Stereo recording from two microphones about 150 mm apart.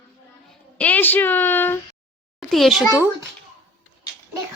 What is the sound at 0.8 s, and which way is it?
A woman's voice, 10° left (ahead or behind).